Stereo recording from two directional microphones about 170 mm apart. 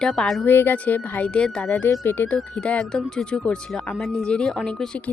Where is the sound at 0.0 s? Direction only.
5° left (ahead or behind).